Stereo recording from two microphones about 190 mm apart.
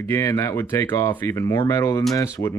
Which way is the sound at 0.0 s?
15° left (ahead or behind).